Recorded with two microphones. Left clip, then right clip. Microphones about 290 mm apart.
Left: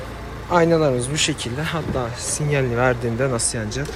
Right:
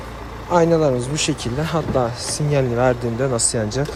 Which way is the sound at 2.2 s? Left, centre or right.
Right.